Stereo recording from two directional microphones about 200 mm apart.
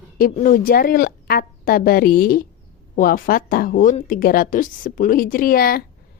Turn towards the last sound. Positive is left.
turn(degrees=45)  # may be behind; listen again after turning